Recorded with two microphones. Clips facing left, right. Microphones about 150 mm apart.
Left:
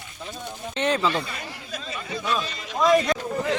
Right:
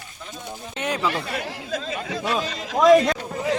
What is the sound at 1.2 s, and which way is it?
Speech, 85° right.